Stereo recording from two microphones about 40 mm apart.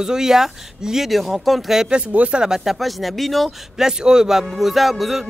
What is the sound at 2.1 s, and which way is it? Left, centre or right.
Speech, right.